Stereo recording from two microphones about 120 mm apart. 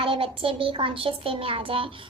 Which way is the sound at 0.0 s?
50° right (ahead or behind).